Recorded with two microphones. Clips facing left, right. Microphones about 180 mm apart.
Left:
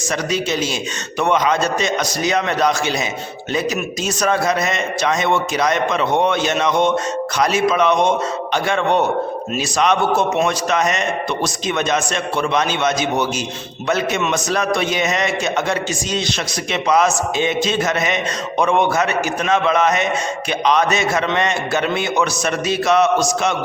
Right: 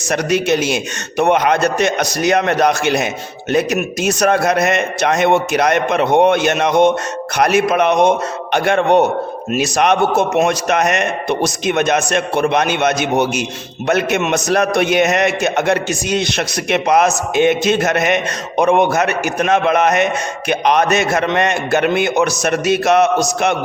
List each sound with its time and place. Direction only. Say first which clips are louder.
0.1 s a man's voice: right 6 dB; 60° right (ahead or behind)